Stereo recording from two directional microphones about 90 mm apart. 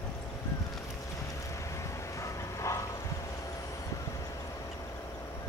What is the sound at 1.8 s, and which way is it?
Bow-wow, 35° left (ahead or behind).